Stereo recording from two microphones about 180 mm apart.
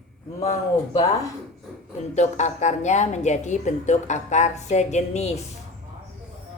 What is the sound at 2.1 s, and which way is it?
A woman's voice, 40° left (ahead or behind).